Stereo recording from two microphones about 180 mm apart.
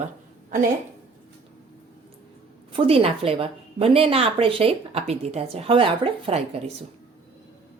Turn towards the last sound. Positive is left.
turn(degrees=-30)  # may be behind; listen again after turning